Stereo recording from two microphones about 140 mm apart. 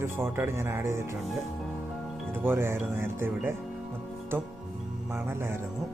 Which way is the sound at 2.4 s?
15° right (ahead or behind).